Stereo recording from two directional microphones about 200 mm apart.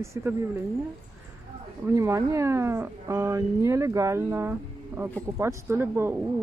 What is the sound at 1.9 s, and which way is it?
Speech, 15° right (ahead or behind).